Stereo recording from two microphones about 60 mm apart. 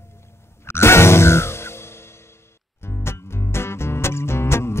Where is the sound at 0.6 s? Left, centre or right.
Left.